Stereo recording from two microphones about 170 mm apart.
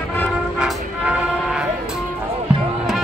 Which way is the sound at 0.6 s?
5° right (ahead or behind).